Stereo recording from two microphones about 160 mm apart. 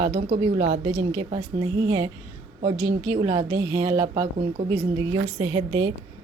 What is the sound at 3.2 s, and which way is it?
Speech, 30° right (ahead or behind).